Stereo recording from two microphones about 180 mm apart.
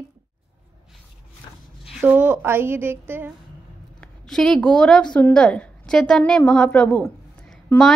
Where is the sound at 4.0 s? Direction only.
5° left (ahead or behind).